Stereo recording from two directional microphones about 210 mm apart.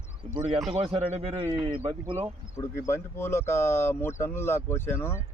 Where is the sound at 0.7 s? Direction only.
30° right (ahead or behind).